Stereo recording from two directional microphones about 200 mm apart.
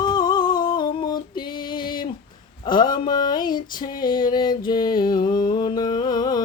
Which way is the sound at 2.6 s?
20° left (ahead or behind).